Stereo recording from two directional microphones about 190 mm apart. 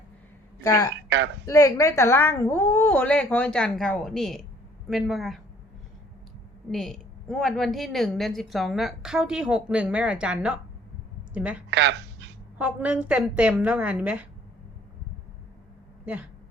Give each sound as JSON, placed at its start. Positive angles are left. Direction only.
{"t": 0.6, "sound": "a woman's voice", "side_deg": 15}
{"t": 6.7, "sound": "a woman's voice", "side_deg": 0}
{"t": 11.7, "sound": "a sound", "side_deg": -65}
{"t": 12.5, "sound": "a woman's voice", "side_deg": -5}
{"t": 16.0, "sound": "a woman's voice", "side_deg": -5}